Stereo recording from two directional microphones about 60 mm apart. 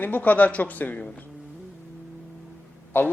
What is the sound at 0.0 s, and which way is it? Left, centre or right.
A man's voice, left.